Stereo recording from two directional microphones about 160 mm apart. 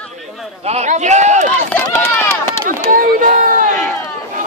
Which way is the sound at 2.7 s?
60° right (ahead or behind).